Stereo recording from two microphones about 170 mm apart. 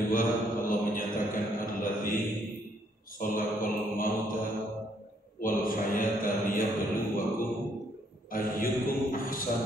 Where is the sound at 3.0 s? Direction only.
55° left (ahead or behind).